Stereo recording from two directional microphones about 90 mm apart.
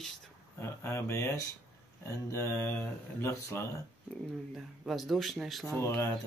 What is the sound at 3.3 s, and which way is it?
Speech, 35° left (ahead or behind).